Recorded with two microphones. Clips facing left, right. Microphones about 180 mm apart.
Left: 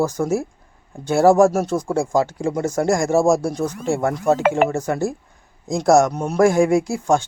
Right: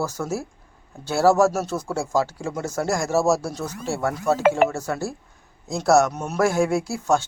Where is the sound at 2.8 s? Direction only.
50° left (ahead or behind).